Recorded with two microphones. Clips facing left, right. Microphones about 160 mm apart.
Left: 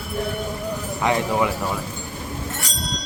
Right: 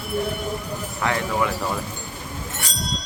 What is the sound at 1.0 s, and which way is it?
Speech, 20° left (ahead or behind).